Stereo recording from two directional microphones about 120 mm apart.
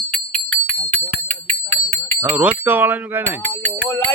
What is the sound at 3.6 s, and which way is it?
Music, 15° left (ahead or behind).